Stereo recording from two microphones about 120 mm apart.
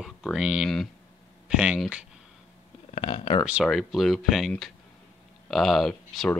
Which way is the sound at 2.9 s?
45° left (ahead or behind).